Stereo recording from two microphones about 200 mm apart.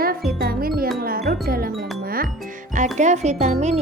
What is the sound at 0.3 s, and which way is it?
Music, 50° right (ahead or behind).